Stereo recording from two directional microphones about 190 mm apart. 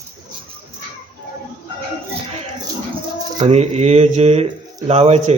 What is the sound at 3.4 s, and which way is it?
A man's voice, 35° right (ahead or behind).